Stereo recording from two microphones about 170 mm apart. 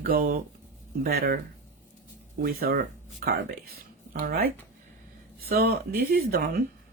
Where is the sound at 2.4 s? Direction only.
60° right (ahead or behind).